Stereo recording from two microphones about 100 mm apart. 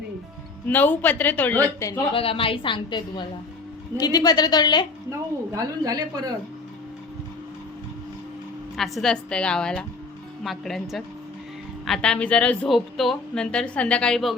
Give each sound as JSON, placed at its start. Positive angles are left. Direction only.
{"t": 0.7, "sound": "a man's voice", "side_deg": 20}
{"t": 1.8, "sound": "a woman's voice", "side_deg": 35}
{"t": 2.1, "sound": "a woman's voice", "side_deg": 65}
{"t": 4.0, "sound": "a woman's voice", "side_deg": 40}
{"t": 5.5, "sound": "speech", "side_deg": -40}
{"t": 8.7, "sound": "a woman's voice", "side_deg": 0}
{"t": 12.6, "sound": "a woman's voice", "side_deg": 0}